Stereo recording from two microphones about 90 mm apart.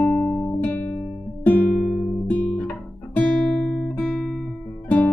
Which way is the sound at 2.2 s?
20° left (ahead or behind).